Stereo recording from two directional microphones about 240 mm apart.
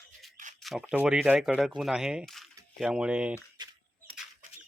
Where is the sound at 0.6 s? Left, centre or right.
Centre.